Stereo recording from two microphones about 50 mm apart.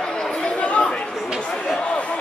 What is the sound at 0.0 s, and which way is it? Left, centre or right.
Chatter, centre.